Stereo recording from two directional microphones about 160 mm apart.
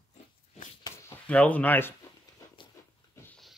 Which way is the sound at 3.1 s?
15° left (ahead or behind).